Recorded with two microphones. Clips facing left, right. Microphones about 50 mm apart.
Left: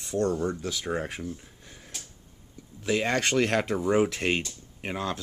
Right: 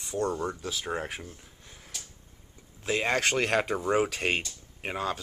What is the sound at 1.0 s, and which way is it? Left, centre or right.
Speech, right.